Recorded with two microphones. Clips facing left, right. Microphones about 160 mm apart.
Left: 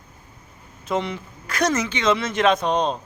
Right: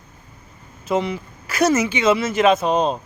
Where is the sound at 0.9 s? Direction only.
Centre (ahead or behind).